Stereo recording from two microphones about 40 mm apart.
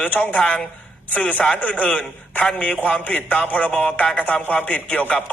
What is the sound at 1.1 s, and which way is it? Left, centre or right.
A man's voice, left.